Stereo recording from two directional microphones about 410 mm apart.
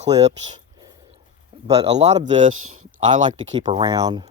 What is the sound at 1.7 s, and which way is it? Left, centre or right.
Speech, centre.